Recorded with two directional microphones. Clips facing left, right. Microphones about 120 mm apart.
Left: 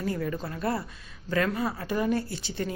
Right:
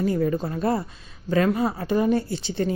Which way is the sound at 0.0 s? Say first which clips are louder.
Right 8 dB; 25° right (ahead or behind).